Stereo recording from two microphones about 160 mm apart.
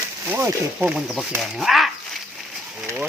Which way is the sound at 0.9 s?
5° right (ahead or behind).